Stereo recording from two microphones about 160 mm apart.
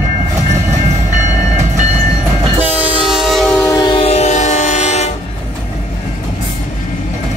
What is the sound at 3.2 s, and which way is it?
Music, centre (ahead or behind).